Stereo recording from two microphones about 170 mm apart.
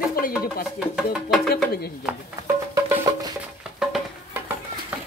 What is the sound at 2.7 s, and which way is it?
Music, 20° right (ahead or behind).